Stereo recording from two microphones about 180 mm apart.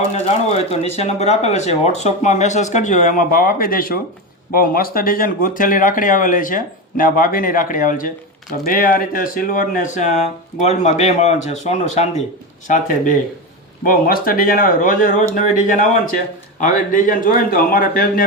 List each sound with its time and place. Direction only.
0.1 s speech: 35° left (ahead or behind); by 18.3 s 50° left (ahead or behind)